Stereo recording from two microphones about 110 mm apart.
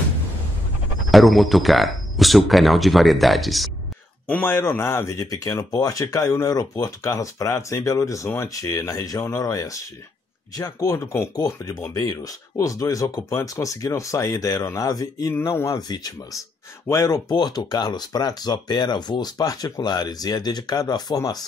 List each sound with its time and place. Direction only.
1.1 s speech: centre (ahead or behind)
4.3 s speech: 15° left (ahead or behind); by 15.3 s 35° left (ahead or behind)
15.3 s speech: 25° left (ahead or behind)
16.8 s speech: 25° left (ahead or behind)